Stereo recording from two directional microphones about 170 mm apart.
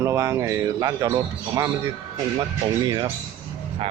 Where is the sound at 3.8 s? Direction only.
35° right (ahead or behind).